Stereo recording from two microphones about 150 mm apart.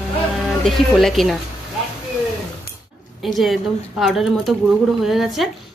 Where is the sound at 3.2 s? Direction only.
Centre (ahead or behind).